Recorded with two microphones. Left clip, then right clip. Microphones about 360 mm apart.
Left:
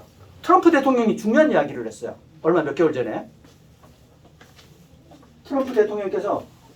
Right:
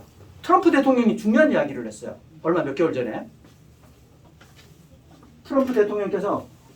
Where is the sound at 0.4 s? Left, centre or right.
Centre.